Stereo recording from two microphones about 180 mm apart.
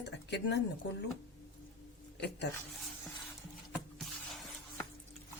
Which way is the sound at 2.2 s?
70° left (ahead or behind).